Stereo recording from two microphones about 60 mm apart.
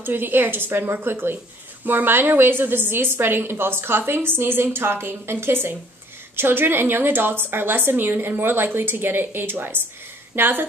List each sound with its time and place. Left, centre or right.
0.0 s a woman's voice: right